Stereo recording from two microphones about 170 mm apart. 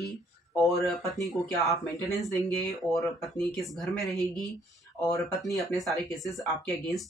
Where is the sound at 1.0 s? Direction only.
20° left (ahead or behind).